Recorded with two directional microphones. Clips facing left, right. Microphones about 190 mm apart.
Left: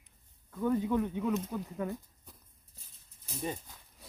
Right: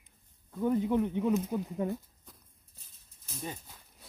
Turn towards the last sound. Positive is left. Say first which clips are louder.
# left 4 dB
turn(degrees=10)  # may be behind; listen again after turning